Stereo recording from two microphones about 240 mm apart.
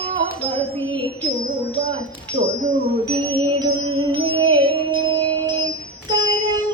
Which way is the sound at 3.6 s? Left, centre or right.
Centre.